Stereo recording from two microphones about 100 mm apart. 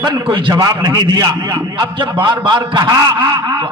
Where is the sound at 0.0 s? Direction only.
50° right (ahead or behind).